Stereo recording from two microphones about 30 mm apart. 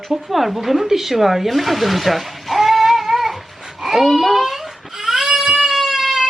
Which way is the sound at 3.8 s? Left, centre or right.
Centre.